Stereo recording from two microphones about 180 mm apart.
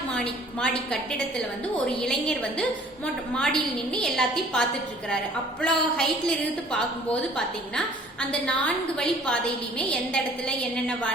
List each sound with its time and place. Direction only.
0.6 s a woman's voice: 5° left (ahead or behind)
5.6 s a woman's voice: 5° left (ahead or behind)